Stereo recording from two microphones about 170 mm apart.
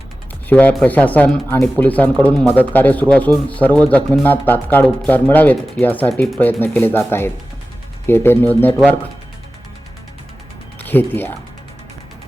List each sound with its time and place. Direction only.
0.4 s speech: 10° left (ahead or behind)
8.0 s speech: 15° left (ahead or behind)
10.8 s speech: 10° left (ahead or behind)